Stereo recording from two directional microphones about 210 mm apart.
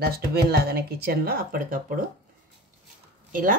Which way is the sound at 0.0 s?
50° right (ahead or behind).